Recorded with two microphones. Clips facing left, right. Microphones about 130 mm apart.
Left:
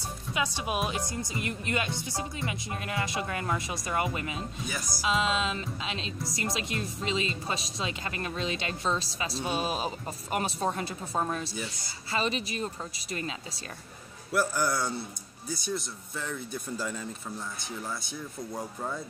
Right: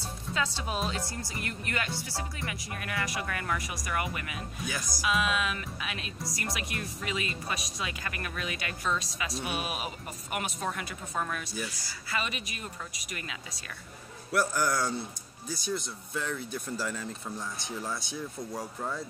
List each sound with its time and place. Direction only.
0.0 s speech: 15° left (ahead or behind); by 13.6 s 30° left (ahead or behind)
14.3 s speech: 10° left (ahead or behind)